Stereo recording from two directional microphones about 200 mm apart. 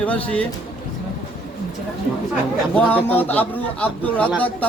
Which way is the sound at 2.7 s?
10° left (ahead or behind).